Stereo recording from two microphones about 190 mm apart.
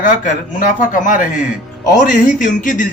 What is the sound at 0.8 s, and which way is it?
Speech, 45° left (ahead or behind).